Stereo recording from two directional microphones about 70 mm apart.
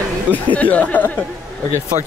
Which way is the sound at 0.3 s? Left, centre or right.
Left.